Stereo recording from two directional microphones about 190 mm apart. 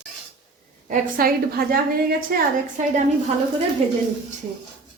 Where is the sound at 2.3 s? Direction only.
40° right (ahead or behind).